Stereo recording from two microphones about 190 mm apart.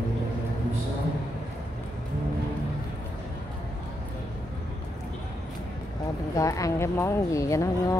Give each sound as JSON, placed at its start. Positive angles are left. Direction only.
{"t": 6.3, "sound": "speech", "side_deg": 15}